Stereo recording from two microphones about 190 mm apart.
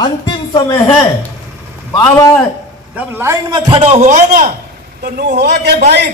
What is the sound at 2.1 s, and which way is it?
Speech, 15° left (ahead or behind).